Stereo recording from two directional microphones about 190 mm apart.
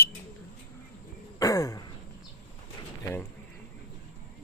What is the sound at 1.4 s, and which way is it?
Throat clearing, 20° left (ahead or behind).